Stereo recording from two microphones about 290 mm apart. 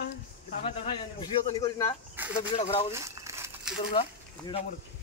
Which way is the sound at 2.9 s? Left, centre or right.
Centre.